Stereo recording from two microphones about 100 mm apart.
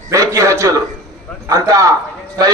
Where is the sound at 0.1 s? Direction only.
30° right (ahead or behind).